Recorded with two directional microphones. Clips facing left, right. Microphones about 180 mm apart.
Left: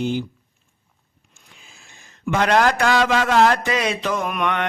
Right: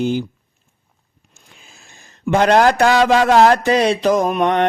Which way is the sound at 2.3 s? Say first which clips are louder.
Right 5 dB; 35° right (ahead or behind).